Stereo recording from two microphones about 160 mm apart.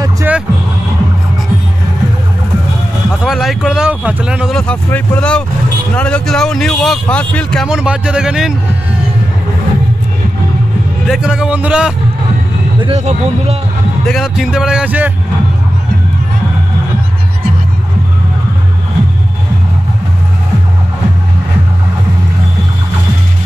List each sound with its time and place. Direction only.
0.3 s music: 10° right (ahead or behind)
3.3 s speech: centre (ahead or behind)
7.6 s speech: 5° right (ahead or behind)
11.1 s speech: 5° right (ahead or behind)
12.8 s speech: 40° right (ahead or behind)
14.0 s speech: centre (ahead or behind)